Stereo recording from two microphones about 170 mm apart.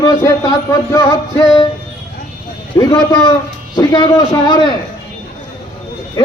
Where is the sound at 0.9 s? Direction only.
20° left (ahead or behind).